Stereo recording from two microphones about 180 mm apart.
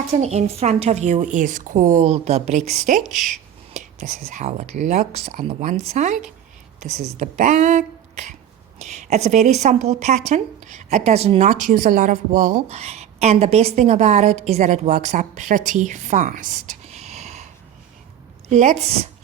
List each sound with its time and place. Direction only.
0.1 s speech: 35° right (ahead or behind)
18.4 s speech: 40° right (ahead or behind)